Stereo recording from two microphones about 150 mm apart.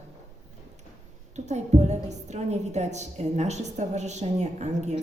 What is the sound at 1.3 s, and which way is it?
A woman's voice, 50° right (ahead or behind).